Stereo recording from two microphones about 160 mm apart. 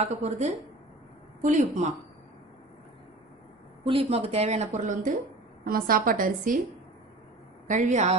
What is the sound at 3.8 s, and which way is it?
A woman's voice, 35° right (ahead or behind).